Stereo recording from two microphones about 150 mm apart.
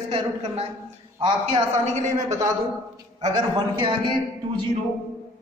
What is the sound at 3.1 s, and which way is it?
Speech, 25° right (ahead or behind).